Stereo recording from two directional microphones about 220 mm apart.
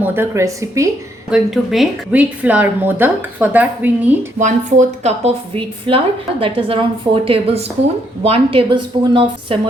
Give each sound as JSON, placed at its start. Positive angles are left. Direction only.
{"t": 0.0, "sound": "a woman's voice", "side_deg": -10}
{"t": 1.3, "sound": "a woman's voice", "side_deg": 0}
{"t": 4.4, "sound": "a woman's voice", "side_deg": -35}